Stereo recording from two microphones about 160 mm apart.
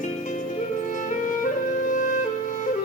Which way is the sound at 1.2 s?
55° left (ahead or behind).